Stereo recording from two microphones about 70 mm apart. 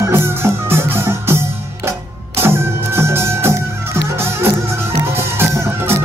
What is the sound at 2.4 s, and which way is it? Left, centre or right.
Music, right.